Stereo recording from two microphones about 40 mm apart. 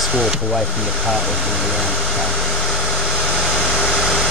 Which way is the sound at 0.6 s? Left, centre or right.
Centre.